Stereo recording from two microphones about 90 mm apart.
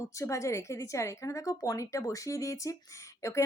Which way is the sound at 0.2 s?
35° left (ahead or behind).